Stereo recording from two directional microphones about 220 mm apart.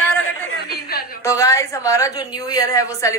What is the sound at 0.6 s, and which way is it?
Speech, 45° left (ahead or behind).